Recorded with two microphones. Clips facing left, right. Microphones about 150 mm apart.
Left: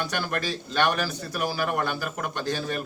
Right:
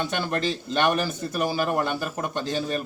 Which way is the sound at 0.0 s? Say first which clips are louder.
Right 3 dB; 25° right (ahead or behind).